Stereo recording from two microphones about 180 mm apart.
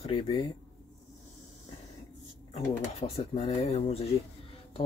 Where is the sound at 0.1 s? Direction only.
25° left (ahead or behind).